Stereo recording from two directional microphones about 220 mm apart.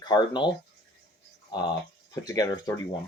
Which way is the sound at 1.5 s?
20° left (ahead or behind).